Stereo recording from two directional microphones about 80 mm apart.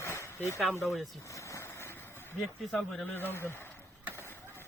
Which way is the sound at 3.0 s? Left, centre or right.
Left.